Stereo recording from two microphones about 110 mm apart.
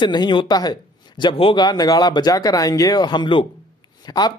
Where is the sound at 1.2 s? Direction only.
50° left (ahead or behind).